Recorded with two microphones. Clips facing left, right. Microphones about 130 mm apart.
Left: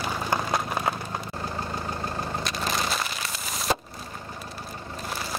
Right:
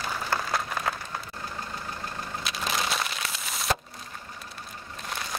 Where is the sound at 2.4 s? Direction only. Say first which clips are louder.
Right 1 dB; centre (ahead or behind).